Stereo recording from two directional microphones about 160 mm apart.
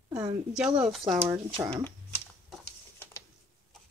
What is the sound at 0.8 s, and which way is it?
Speech, centre (ahead or behind).